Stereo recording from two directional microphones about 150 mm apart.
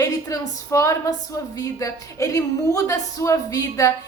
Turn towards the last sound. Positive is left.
turn(degrees=20)  # may be behind; listen again after turning